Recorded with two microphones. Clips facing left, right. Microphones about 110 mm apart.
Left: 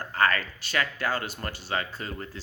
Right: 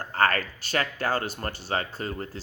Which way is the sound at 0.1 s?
40° right (ahead or behind).